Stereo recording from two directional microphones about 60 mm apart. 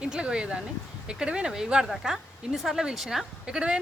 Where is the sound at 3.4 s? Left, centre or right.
Centre.